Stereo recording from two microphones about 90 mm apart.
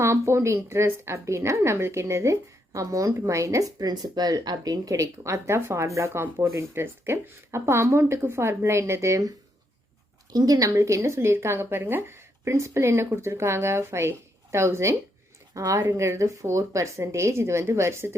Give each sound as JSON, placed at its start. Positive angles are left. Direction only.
{"t": 0.0, "sound": "a woman's voice", "side_deg": -30}
{"t": 6.2, "sound": "speech", "side_deg": -20}
{"t": 10.3, "sound": "a woman's voice", "side_deg": -45}